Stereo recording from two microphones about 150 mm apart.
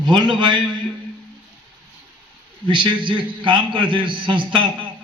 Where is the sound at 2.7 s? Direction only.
30° right (ahead or behind).